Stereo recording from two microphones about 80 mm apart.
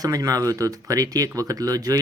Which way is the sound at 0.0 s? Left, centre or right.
Right.